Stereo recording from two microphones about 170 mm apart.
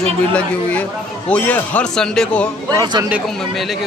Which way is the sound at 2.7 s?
25° right (ahead or behind).